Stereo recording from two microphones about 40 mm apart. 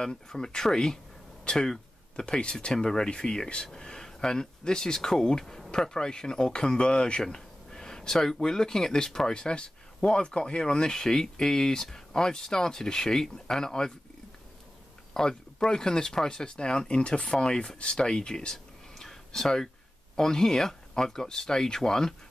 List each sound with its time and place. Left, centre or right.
0.0 s speech: centre
5.4 s speech: centre
5.7 s speech: centre
15.1 s speech: centre
18.0 s a sound: left
20.2 s speech: centre